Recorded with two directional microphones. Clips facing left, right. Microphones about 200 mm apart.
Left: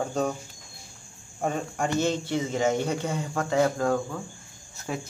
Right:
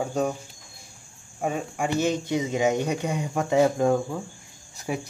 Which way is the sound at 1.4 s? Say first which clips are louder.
Right 1 dB; 5° right (ahead or behind).